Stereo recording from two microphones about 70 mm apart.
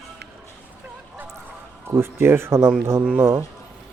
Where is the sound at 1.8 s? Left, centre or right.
Right.